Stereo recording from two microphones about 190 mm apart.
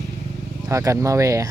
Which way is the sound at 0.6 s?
15° right (ahead or behind).